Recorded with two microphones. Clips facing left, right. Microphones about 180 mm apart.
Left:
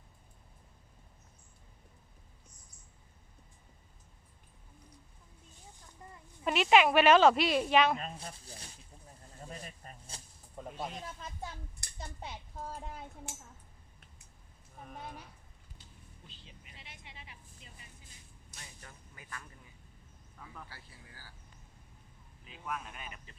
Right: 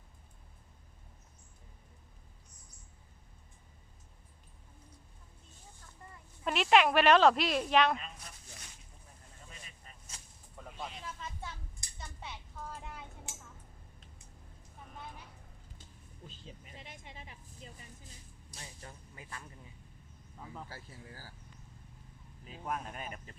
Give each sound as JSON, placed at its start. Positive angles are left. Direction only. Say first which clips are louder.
{"t": 6.4, "sound": "speech", "louder": "left 1 dB", "side_deg": 0}
{"t": 8.1, "sound": "a sound", "louder": "left 7 dB", "side_deg": 30}
{"t": 10.6, "sound": "snake", "louder": "left 4 dB", "side_deg": 40}
{"t": 11.9, "sound": "a sound", "louder": "left 3 dB", "side_deg": 40}
{"t": 16.2, "sound": "vehicle", "louder": "right 8 dB", "side_deg": -45}
{"t": 18.5, "sound": "vehicle", "louder": "right 4 dB", "side_deg": -30}
{"t": 20.4, "sound": "a sound", "louder": "right 4 dB", "side_deg": -25}
{"t": 20.7, "sound": "speech", "louder": "right 6 dB", "side_deg": -40}
{"t": 22.4, "sound": "speech", "louder": "right 2 dB", "side_deg": -35}